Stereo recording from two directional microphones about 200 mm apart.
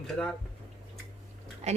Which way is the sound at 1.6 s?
35° right (ahead or behind).